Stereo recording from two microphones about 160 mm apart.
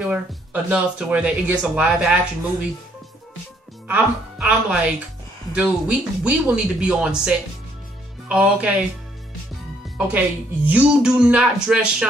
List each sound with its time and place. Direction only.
0.1 s speech: 10° right (ahead or behind)
3.8 s speech: 10° right (ahead or behind)
9.9 s speech: 10° right (ahead or behind)